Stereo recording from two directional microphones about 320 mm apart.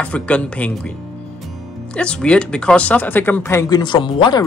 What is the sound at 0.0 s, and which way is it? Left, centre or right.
Speech, centre.